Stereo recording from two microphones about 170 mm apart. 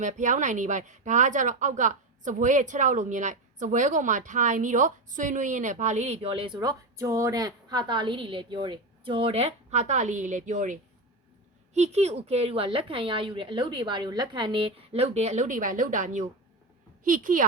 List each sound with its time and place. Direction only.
0.0 s a woman's voice: 45° right (ahead or behind)